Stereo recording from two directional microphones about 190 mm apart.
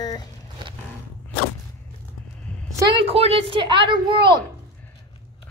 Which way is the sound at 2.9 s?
30° right (ahead or behind).